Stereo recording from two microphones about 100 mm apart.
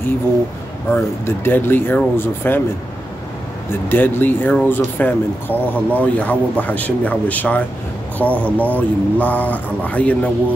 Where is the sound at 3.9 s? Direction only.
20° left (ahead or behind).